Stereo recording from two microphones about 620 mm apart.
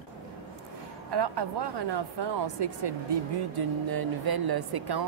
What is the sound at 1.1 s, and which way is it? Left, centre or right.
A woman's voice, right.